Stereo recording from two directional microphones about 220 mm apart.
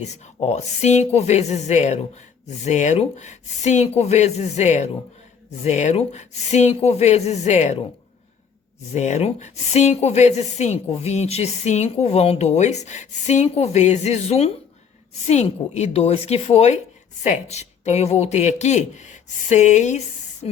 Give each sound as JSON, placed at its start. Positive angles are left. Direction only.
{"t": 0.3, "sound": "a woman's voice", "side_deg": 30}
{"t": 8.9, "sound": "a woman's voice", "side_deg": 30}